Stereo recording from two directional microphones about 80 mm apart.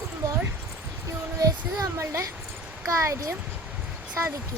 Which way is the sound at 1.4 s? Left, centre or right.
Right.